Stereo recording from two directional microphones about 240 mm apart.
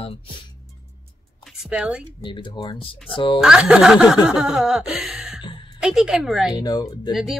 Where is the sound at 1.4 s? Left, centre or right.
Centre.